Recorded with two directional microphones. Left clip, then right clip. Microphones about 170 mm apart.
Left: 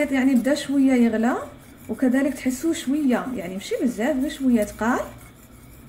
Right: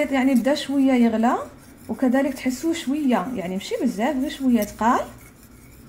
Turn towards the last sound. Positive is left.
turn(degrees=-25)  # may be behind; listen again after turning